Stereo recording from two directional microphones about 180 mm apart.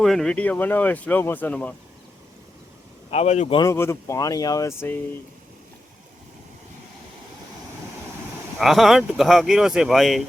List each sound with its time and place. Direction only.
0.0 s speech: centre (ahead or behind)
3.1 s speech: 40° left (ahead or behind)
3.6 s speech: 15° left (ahead or behind)
8.5 s speech: centre (ahead or behind)